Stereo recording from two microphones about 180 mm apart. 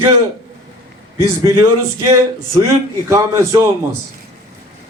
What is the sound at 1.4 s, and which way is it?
A man's voice, 15° right (ahead or behind).